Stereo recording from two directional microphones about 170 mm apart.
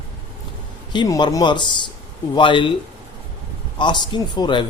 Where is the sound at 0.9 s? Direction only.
25° left (ahead or behind).